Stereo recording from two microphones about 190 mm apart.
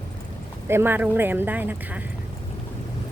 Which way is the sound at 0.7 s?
10° right (ahead or behind).